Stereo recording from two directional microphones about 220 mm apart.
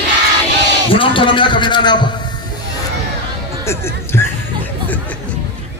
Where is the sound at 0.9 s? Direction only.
25° left (ahead or behind).